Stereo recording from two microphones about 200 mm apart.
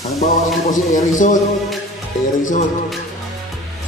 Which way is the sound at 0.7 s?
40° left (ahead or behind).